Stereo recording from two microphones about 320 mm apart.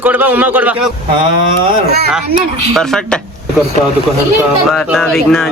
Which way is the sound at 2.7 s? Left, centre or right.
Centre.